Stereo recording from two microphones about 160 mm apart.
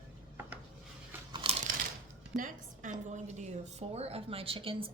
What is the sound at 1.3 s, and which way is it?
Crunch, 35° right (ahead or behind).